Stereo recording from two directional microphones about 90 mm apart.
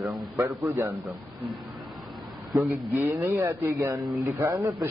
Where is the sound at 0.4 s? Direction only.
30° right (ahead or behind).